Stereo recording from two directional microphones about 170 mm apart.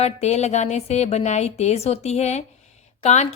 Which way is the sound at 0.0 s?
40° left (ahead or behind).